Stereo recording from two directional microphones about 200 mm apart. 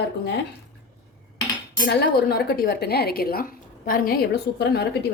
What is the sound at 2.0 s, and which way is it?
A woman's voice, 55° left (ahead or behind).